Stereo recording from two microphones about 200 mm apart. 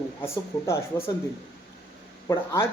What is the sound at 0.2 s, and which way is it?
Speech, 15° left (ahead or behind).